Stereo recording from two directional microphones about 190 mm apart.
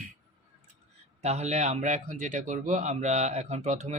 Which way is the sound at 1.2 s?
35° right (ahead or behind).